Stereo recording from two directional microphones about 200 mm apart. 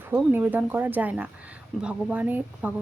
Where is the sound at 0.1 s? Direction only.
10° right (ahead or behind).